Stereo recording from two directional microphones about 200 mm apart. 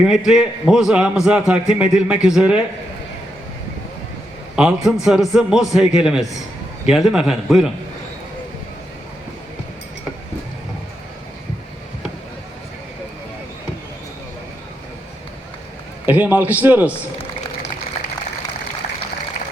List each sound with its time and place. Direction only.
0.3 s a man's voice: centre (ahead or behind)
4.5 s a man's voice: 5° right (ahead or behind)
16.0 s a man's voice: 10° right (ahead or behind)
18.0 s a sound: 45° left (ahead or behind)